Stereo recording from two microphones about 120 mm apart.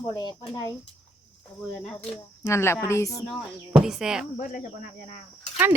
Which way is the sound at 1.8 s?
5° left (ahead or behind).